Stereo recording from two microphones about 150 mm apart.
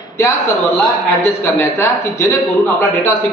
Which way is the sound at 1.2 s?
15° left (ahead or behind).